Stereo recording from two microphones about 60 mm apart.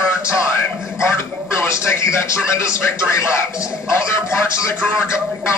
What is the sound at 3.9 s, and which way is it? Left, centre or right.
Speech, left.